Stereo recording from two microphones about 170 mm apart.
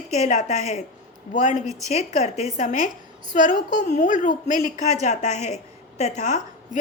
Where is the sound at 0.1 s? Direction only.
40° left (ahead or behind).